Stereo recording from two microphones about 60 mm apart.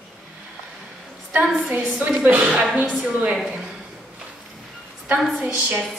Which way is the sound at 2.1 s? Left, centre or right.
Right.